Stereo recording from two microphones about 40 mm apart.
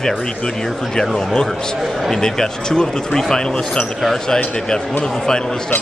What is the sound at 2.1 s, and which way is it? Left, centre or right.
Speech, centre.